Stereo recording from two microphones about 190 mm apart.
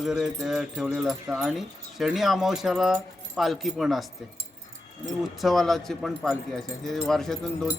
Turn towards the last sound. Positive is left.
turn(degrees=0)  # may be behind; listen again after turning